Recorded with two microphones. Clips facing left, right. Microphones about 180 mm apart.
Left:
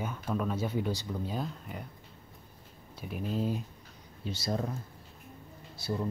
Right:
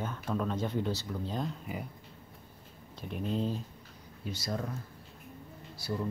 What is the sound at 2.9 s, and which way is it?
Speech, 5° left (ahead or behind).